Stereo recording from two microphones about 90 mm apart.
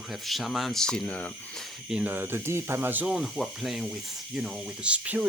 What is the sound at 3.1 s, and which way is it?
Speech, centre (ahead or behind).